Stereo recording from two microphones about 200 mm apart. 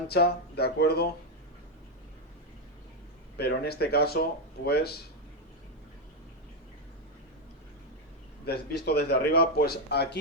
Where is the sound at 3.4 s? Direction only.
50° left (ahead or behind).